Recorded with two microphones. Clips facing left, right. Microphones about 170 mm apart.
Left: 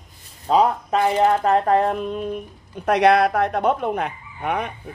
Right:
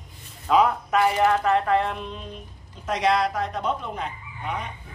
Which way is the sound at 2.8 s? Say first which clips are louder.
Left 7 dB; 60° left (ahead or behind).